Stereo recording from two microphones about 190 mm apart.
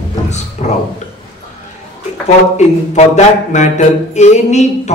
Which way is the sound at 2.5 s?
35° left (ahead or behind).